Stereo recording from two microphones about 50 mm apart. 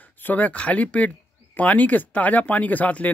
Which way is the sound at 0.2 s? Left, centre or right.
Left.